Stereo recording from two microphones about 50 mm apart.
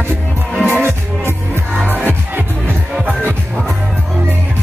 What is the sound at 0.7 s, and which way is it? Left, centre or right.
Music, right.